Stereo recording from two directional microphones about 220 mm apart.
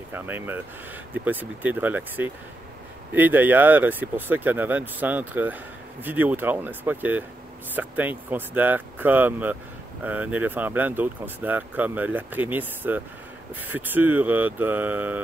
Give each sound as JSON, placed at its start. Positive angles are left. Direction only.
{"t": 0.1, "sound": "speech", "side_deg": -10}